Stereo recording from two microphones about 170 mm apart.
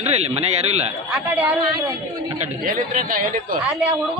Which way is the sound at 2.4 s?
55° right (ahead or behind).